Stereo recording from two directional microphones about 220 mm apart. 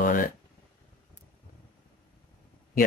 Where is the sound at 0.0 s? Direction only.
40° left (ahead or behind).